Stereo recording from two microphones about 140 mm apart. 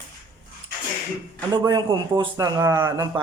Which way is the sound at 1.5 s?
30° right (ahead or behind).